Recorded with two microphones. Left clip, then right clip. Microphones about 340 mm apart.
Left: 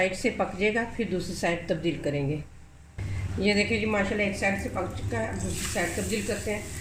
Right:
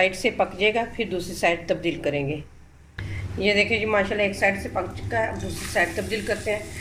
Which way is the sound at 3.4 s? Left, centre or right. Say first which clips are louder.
Right 5 dB; right.